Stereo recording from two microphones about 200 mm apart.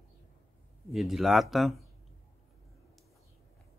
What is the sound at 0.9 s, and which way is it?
Speech, centre (ahead or behind).